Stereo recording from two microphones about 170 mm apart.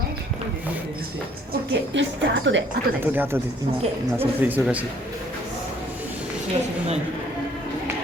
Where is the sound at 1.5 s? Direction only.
90° right.